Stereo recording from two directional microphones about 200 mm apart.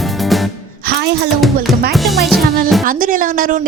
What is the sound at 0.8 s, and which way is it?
Music, 50° right (ahead or behind).